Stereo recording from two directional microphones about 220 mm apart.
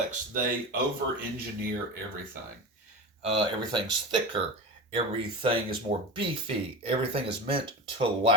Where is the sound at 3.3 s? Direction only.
20° right (ahead or behind).